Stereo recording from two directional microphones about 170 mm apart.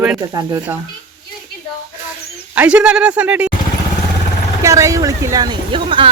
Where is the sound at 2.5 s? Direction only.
10° right (ahead or behind).